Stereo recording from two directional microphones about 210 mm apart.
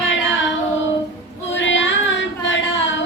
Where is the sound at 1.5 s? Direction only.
60° left (ahead or behind).